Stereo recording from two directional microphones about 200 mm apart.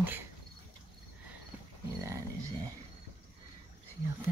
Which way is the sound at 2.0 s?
15° right (ahead or behind).